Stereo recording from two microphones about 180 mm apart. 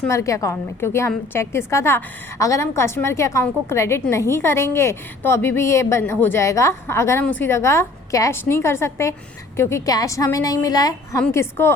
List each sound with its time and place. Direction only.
0.1 s a woman's voice: 15° left (ahead or behind)